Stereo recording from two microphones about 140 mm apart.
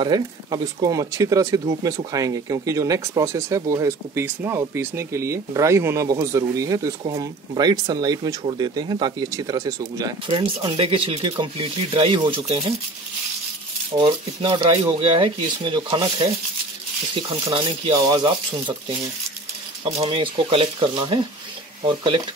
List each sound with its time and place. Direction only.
0.0 s speech: 30° right (ahead or behind)
10.2 s speech: 40° right (ahead or behind)
14.0 s speech: 35° right (ahead or behind)
17.9 s speech: 25° right (ahead or behind)
19.8 s speech: 40° right (ahead or behind)